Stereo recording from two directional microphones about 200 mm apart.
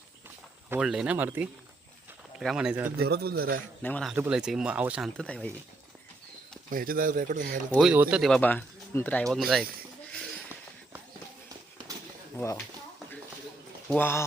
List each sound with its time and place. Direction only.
0.7 s speech: 5° right (ahead or behind)
3.0 s speech: 50° right (ahead or behind)
3.8 s speech: 5° left (ahead or behind)
4.1 s speech: 5° right (ahead or behind)
6.7 s speech: 45° right (ahead or behind)
7.8 s speech: 5° right (ahead or behind)
13.8 s speech: 10° left (ahead or behind)